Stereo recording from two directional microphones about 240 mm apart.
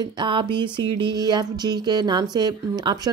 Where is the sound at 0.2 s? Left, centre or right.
Right.